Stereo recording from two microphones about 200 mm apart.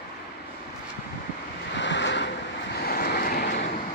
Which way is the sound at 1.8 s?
65° left (ahead or behind).